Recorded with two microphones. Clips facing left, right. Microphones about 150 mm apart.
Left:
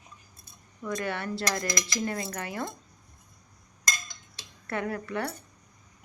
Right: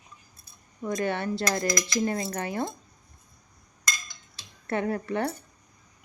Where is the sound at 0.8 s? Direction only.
25° right (ahead or behind).